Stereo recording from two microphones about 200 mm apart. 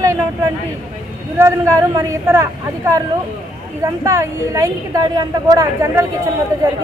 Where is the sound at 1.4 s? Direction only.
15° right (ahead or behind).